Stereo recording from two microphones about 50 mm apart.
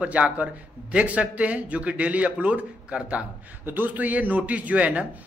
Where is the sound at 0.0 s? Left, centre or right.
Right.